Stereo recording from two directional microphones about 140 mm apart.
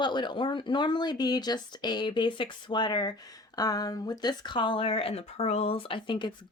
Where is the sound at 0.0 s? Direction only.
30° left (ahead or behind).